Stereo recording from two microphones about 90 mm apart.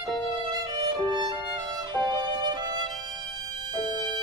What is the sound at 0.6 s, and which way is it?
Violin, 50° right (ahead or behind).